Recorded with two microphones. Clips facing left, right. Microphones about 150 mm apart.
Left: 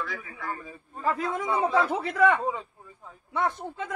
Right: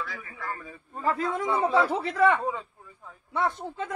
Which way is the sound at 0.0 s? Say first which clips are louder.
Left 1 dB; centre (ahead or behind).